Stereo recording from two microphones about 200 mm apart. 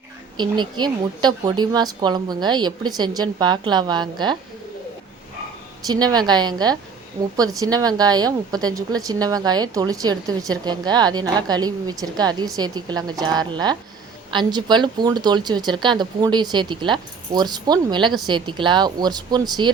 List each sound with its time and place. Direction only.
0.3 s speech: 20° right (ahead or behind)
5.9 s speech: 20° right (ahead or behind)